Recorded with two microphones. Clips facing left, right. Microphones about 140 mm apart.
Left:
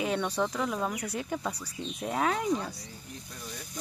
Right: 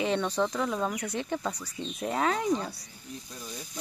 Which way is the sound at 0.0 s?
5° left (ahead or behind).